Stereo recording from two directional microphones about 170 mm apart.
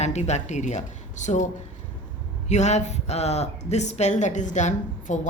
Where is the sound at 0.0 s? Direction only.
40° left (ahead or behind).